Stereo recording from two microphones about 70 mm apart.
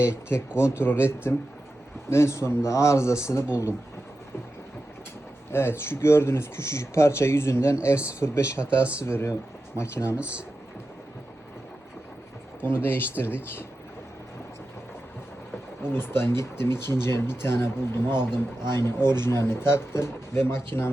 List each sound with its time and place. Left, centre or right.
0.0 s a man's voice: left
5.5 s speech: left
10.2 s speech: centre
12.6 s speech: left
15.9 s speech: left